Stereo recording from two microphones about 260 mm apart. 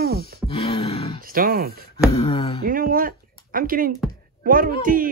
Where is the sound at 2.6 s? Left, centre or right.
Right.